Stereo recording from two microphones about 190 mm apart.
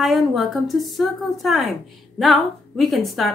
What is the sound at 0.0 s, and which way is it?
Speech, centre (ahead or behind).